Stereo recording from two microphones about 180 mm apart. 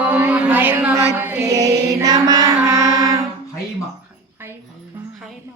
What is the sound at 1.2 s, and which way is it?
Mantra, 10° right (ahead or behind).